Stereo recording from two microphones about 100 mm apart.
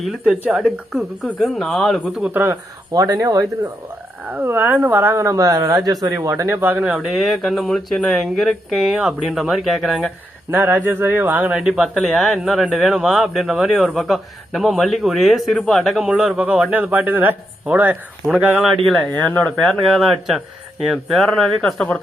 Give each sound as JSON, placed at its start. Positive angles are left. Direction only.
{"t": 0.0, "sound": "speech", "side_deg": 0}
{"t": 0.4, "sound": "a man's voice", "side_deg": -15}
{"t": 1.2, "sound": "speech", "side_deg": 0}
{"t": 2.3, "sound": "speech", "side_deg": -20}
{"t": 2.9, "sound": "speech", "side_deg": -35}
{"t": 4.3, "sound": "speech", "side_deg": -20}
{"t": 6.8, "sound": "speech", "side_deg": -5}
{"t": 10.5, "sound": "a man's voice", "side_deg": -20}
{"t": 18.9, "sound": "speech", "side_deg": 10}
{"t": 19.9, "sound": "speech", "side_deg": 0}